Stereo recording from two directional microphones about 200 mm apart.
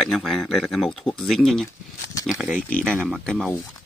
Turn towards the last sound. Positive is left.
turn(degrees=5)  # may be behind; listen again after turning